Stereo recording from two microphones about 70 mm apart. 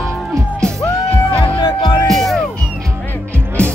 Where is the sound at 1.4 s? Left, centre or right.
Left.